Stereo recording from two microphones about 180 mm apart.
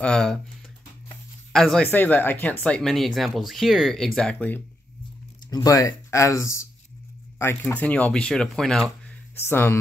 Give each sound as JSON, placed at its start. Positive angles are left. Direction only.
{"t": 0.0, "sound": "speech", "side_deg": 5}
{"t": 1.5, "sound": "speech", "side_deg": 5}
{"t": 5.5, "sound": "speech", "side_deg": 20}
{"t": 9.4, "sound": "speech", "side_deg": 15}